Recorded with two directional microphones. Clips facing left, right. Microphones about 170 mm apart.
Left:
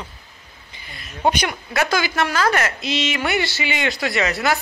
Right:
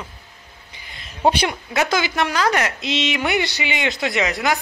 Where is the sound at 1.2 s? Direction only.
30° right (ahead or behind).